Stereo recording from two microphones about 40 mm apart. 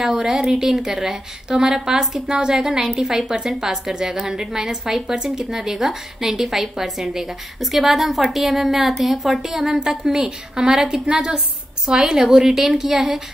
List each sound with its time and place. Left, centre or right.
0.0 s a woman's voice: centre